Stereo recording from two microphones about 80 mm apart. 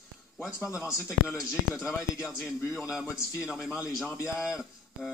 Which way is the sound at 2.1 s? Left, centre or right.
Centre.